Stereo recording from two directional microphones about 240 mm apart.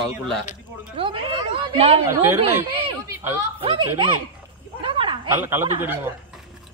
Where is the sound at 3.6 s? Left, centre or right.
Right.